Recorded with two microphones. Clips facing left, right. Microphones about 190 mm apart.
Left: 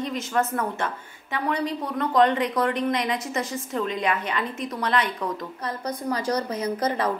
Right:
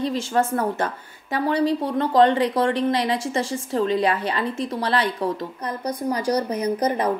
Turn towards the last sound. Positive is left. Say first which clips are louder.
# right 3 dB
turn(degrees=-15)  # may be behind; listen again after turning